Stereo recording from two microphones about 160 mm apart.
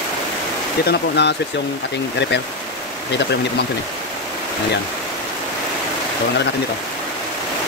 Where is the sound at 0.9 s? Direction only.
90° left.